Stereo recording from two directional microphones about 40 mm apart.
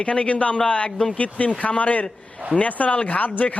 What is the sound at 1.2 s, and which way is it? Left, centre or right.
A man's voice, left.